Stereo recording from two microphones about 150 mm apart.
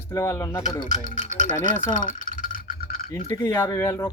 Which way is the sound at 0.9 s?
55° left (ahead or behind).